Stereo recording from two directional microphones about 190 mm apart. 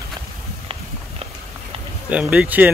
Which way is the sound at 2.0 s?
5° right (ahead or behind).